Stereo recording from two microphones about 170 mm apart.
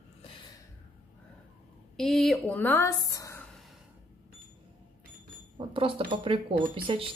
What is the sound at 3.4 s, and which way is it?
Gasp, centre (ahead or behind).